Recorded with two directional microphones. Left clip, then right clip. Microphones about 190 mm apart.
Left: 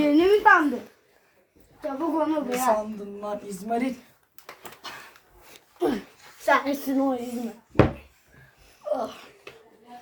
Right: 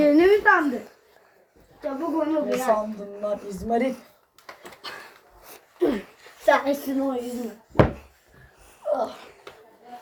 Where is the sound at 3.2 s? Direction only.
25° left (ahead or behind).